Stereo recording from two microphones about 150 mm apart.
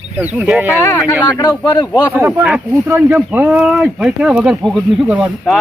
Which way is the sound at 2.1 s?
10° right (ahead or behind).